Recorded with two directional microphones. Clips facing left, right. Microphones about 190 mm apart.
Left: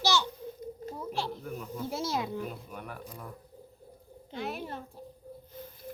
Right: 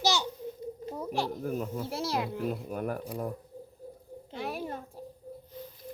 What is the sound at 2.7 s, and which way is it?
Speech, 40° right (ahead or behind).